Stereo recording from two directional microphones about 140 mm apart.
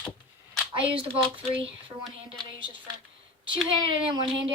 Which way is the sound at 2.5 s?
40° right (ahead or behind).